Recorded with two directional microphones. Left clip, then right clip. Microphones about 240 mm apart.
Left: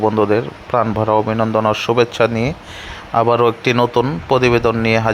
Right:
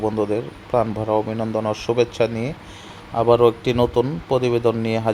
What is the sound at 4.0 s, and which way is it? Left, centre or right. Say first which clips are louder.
Speech: left 5 dB; left.